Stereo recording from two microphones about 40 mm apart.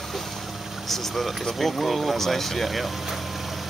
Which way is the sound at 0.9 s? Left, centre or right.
Centre.